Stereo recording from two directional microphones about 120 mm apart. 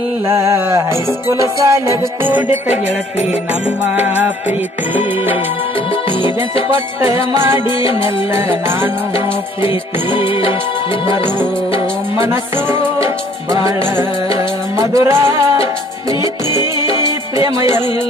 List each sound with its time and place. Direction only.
0.3 s music: 25° right (ahead or behind)
3.9 s music: 15° right (ahead or behind)
7.3 s music: 20° right (ahead or behind)
9.1 s music: 45° left (ahead or behind)
12.1 s music: 20° right (ahead or behind)
16.2 s music: 35° left (ahead or behind)